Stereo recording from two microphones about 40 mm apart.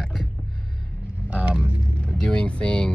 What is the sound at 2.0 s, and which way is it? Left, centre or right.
Speech, left.